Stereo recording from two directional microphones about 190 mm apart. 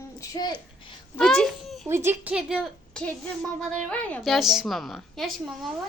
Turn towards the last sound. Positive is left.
turn(degrees=0)  # may be behind; listen again after turning